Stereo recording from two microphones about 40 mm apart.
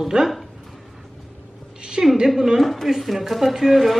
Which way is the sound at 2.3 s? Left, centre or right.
Centre.